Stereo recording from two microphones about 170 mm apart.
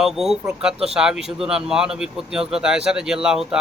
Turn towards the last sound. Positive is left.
turn(degrees=-5)  # may be behind; listen again after turning